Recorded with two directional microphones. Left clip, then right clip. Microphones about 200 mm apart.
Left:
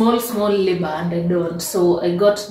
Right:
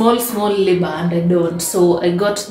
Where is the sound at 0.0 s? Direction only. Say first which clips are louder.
Right 3 dB; 10° right (ahead or behind).